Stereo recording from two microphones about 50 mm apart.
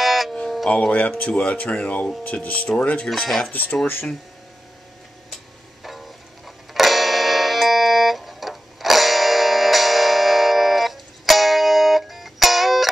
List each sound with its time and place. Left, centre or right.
0.0 s music: centre
0.7 s speech: left
3.8 s speech: left
5.9 s music: centre